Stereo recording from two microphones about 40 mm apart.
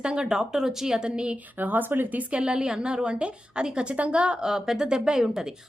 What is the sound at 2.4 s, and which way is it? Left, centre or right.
A woman's voice, centre.